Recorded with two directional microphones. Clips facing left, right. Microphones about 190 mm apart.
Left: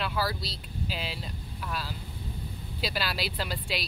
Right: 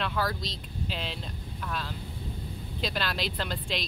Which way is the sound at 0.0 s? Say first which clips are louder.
Even; 5° left (ahead or behind).